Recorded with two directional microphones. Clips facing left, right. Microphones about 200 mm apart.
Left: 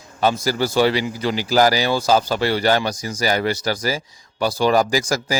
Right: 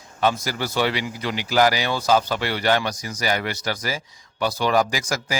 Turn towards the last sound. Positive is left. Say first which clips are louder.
# left 6 dB
turn(degrees=35)  # may be behind; listen again after turning